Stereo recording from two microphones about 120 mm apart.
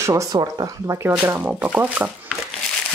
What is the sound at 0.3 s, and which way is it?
Speech, 35° right (ahead or behind).